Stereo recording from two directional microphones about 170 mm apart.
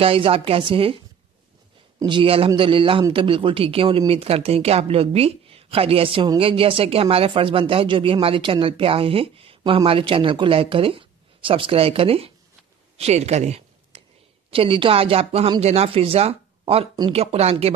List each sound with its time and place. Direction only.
0.0 s a man's voice: 35° right (ahead or behind)
2.0 s a man's voice: 30° right (ahead or behind)
12.9 s a sound: 40° right (ahead or behind)
14.5 s a man's voice: 30° right (ahead or behind)